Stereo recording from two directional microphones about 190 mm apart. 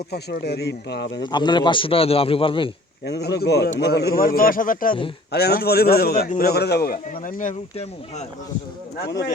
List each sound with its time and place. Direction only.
0.1 s speech: 60° left (ahead or behind)
1.2 s a man's voice: 25° left (ahead or behind)
3.1 s a man's voice: 60° left (ahead or behind)
5.3 s a man's voice: 55° left (ahead or behind)
9.0 s speech: 60° left (ahead or behind)